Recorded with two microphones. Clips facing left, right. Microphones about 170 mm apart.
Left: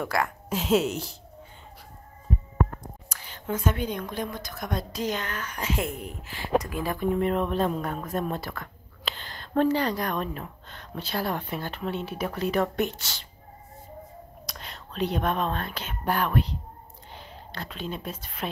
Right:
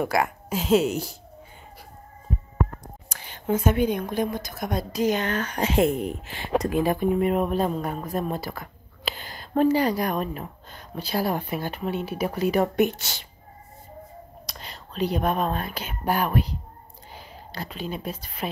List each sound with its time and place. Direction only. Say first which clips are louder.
0.0 s speech: right 4 dB; 15° right (ahead or behind)
0.5 s a woman's voice: right 2 dB; centre (ahead or behind)
3.2 s a sound: right 6 dB; 20° right (ahead or behind)
4.1 s speech: right 6 dB; 15° right (ahead or behind)
5.3 s speech: right 8 dB; 80° right
5.6 s a woman's voice: right 9 dB; 25° right (ahead or behind)
14.5 s speech: right 1 dB; centre (ahead or behind)